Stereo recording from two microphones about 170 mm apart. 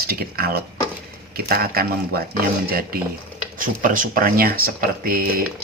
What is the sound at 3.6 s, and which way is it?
Speech, 50° right (ahead or behind).